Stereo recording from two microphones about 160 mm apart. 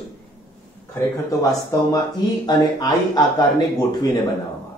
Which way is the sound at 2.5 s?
25° left (ahead or behind).